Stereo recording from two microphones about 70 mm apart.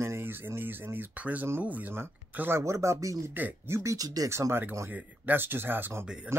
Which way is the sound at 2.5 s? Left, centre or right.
Right.